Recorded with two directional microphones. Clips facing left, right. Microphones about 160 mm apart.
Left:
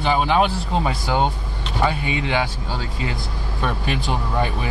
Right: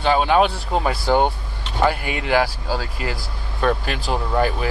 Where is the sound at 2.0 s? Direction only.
25° left (ahead or behind).